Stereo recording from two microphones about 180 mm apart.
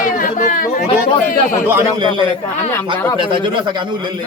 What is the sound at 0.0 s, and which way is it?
Chatter, 50° left (ahead or behind).